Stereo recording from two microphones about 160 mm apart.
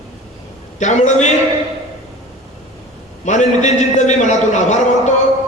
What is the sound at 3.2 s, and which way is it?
A man's voice, 50° left (ahead or behind).